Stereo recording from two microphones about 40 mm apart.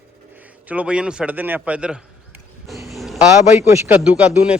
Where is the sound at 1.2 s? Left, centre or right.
Right.